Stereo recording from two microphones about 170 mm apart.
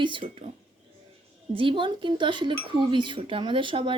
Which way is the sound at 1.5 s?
30° right (ahead or behind).